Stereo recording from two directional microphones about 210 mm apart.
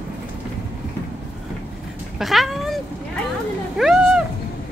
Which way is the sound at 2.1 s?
Centre (ahead or behind).